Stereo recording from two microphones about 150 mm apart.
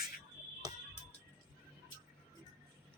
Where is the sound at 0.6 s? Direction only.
25° right (ahead or behind).